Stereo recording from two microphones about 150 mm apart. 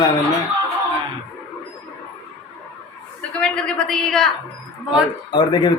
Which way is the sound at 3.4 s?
5° left (ahead or behind).